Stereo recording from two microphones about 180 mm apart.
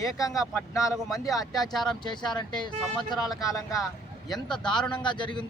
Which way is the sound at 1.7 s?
Centre (ahead or behind).